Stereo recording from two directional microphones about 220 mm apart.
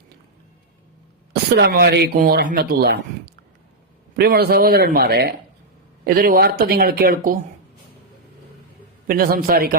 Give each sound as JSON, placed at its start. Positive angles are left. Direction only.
{"t": 1.3, "sound": "speech", "side_deg": -50}
{"t": 9.0, "sound": "a man's voice", "side_deg": -40}